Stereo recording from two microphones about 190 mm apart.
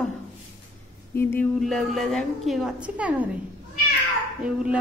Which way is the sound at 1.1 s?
10° left (ahead or behind).